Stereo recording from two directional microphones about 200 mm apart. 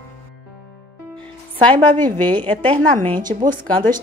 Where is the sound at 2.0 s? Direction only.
10° left (ahead or behind).